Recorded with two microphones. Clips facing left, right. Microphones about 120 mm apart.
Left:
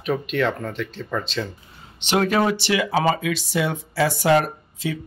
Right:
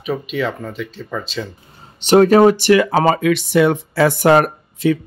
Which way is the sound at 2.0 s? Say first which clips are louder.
Right 10 dB; 40° right (ahead or behind).